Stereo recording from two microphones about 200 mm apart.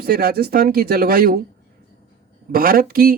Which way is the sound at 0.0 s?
50° right (ahead or behind).